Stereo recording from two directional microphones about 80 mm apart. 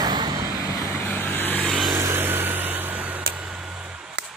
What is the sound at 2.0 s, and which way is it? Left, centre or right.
Vehicle, right.